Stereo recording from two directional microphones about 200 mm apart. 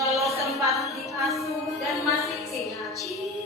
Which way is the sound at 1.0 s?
Centre (ahead or behind).